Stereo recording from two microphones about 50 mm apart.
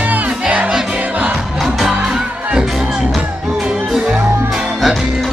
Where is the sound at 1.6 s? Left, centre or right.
Centre.